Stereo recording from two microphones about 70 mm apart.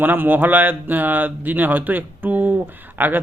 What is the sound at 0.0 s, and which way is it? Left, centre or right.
A man's voice, right.